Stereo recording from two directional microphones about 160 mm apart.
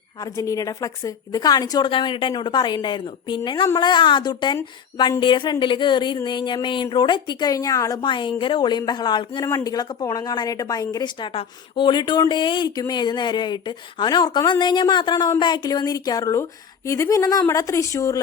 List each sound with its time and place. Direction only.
0.2 s a woman's voice: 20° left (ahead or behind)